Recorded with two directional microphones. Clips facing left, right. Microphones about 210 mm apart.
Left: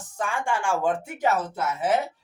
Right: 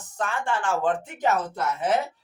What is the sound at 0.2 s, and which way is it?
Speech, 10° left (ahead or behind).